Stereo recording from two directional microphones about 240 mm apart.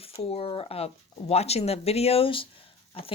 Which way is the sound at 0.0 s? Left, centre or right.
Left.